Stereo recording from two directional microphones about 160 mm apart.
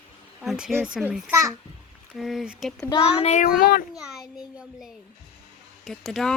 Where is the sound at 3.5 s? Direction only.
70° left (ahead or behind).